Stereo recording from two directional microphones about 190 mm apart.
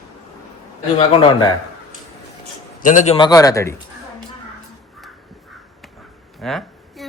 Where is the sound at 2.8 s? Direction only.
40° left (ahead or behind).